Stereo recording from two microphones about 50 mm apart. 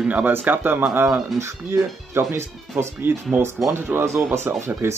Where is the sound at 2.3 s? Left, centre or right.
Right.